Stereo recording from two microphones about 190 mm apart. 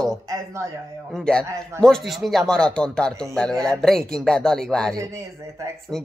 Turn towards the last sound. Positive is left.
turn(degrees=5)  # may be behind; listen again after turning